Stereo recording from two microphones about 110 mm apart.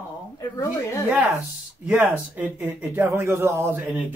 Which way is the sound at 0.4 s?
30° left (ahead or behind).